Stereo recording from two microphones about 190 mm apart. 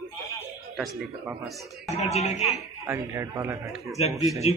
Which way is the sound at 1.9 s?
35° left (ahead or behind).